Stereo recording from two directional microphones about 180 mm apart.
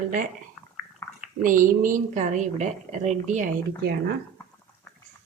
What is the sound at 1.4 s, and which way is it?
A woman's voice, 45° right (ahead or behind).